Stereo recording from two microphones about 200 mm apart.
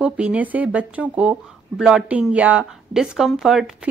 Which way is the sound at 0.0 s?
5° right (ahead or behind).